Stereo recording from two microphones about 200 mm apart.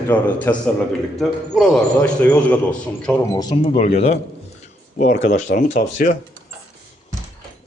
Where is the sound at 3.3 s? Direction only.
25° left (ahead or behind).